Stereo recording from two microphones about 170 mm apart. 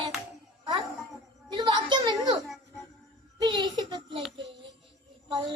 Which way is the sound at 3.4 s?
25° right (ahead or behind).